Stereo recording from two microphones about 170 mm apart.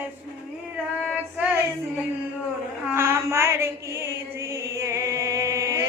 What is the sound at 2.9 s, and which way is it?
Mantra, 15° right (ahead or behind).